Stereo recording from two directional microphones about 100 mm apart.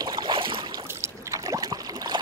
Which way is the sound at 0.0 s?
45° right (ahead or behind).